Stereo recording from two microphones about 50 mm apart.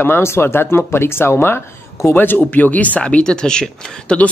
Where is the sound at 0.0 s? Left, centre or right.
Left.